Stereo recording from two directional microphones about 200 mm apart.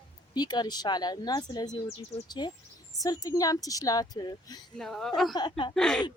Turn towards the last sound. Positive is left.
turn(degrees=5)  # may be behind; listen again after turning